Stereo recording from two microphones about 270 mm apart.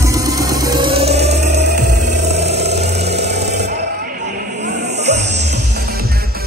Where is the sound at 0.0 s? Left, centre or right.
Centre.